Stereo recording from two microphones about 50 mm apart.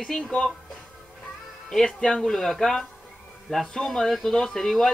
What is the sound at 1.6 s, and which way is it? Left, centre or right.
Speech, centre.